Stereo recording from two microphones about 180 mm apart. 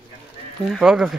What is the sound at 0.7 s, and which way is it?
Speech, 5° right (ahead or behind).